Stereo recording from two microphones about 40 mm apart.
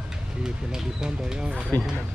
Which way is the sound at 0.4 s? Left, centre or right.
Centre.